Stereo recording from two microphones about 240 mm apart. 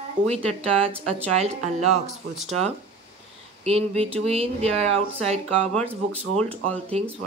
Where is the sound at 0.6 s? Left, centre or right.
Right.